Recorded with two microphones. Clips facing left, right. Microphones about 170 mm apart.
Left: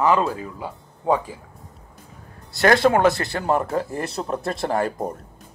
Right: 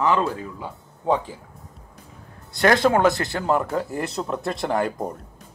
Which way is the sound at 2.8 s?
Centre (ahead or behind).